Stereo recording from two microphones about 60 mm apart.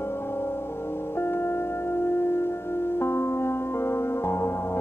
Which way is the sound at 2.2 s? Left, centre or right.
Left.